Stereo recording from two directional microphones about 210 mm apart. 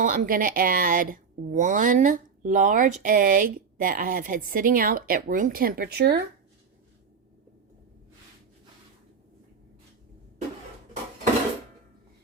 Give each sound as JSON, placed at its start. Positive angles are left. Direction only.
{"t": 0.0, "sound": "speech", "side_deg": -40}